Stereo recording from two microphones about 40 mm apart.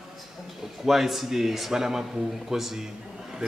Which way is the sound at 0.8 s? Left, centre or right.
Centre.